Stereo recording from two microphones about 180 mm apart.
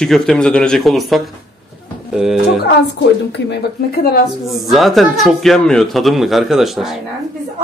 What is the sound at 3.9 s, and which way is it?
Speech, 60° left (ahead or behind).